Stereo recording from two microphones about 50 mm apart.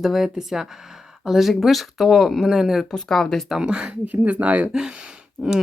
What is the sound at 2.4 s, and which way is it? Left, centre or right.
Speech, centre.